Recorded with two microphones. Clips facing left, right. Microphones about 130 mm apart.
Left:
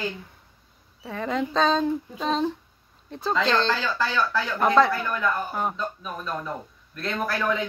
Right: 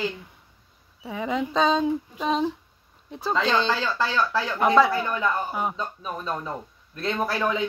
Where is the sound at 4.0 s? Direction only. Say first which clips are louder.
Right 1 dB; 25° right (ahead or behind).